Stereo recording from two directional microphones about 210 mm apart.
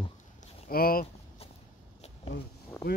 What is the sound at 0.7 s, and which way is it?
Speech, 45° left (ahead or behind).